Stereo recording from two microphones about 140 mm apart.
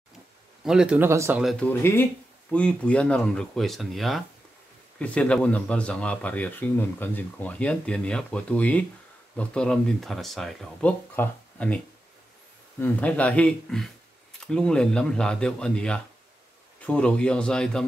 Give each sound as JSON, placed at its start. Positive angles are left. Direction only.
{"t": 0.7, "sound": "speech", "side_deg": -5}
{"t": 1.4, "sound": "speech", "side_deg": 0}
{"t": 1.7, "sound": "speech", "side_deg": 15}
{"t": 12.8, "sound": "speech", "side_deg": 10}